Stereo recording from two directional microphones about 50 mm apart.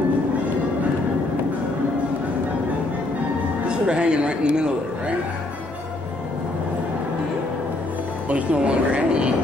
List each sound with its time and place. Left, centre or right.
3.6 s speech: centre
8.3 s speech: right